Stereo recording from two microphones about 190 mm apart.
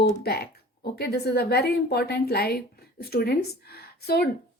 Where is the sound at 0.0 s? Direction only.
55° left (ahead or behind).